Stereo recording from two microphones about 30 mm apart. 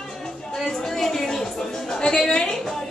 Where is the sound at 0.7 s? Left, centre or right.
Left.